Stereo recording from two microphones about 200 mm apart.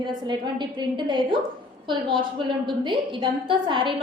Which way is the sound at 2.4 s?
25° right (ahead or behind).